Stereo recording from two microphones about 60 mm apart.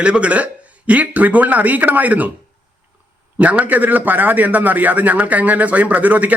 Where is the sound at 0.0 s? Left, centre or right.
Centre.